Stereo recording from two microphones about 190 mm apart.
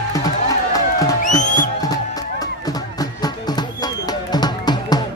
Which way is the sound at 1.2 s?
40° left (ahead or behind).